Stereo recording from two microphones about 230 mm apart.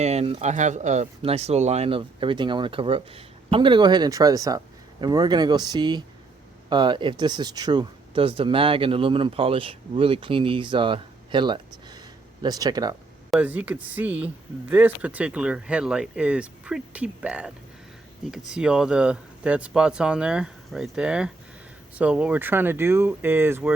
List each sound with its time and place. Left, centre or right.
0.0 s speech: right; by 17.5 s centre
18.5 s speech: centre